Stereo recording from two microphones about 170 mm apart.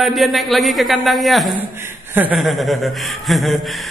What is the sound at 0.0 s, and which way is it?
A man's voice, centre (ahead or behind).